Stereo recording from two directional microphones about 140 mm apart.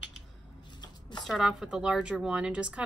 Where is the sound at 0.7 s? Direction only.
30° left (ahead or behind).